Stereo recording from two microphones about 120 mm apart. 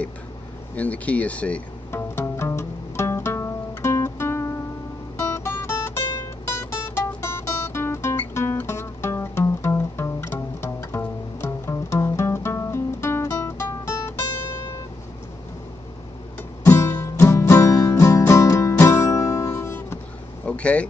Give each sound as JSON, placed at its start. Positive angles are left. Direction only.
{"t": 0.7, "sound": "speech", "side_deg": 10}
{"t": 2.0, "sound": "music", "side_deg": 20}
{"t": 16.6, "sound": "music", "side_deg": 25}
{"t": 20.4, "sound": "a sound", "side_deg": 10}